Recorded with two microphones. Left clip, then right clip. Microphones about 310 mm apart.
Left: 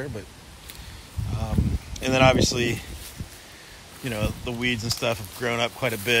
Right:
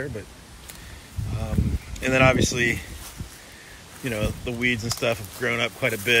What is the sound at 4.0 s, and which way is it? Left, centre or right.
Speech, centre.